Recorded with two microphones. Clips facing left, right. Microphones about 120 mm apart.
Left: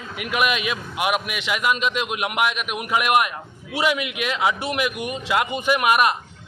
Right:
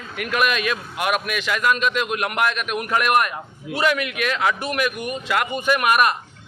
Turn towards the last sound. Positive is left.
turn(degrees=15)  # may be behind; listen again after turning